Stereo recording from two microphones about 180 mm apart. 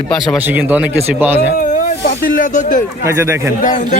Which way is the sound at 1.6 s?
50° left (ahead or behind).